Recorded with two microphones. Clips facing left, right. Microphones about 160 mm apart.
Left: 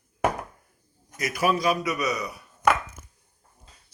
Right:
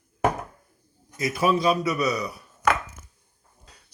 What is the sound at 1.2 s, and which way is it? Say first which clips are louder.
A man's voice: right 2 dB; 25° right (ahead or behind).